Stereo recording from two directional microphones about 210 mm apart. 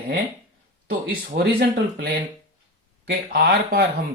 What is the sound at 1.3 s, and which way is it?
Speech, 50° right (ahead or behind).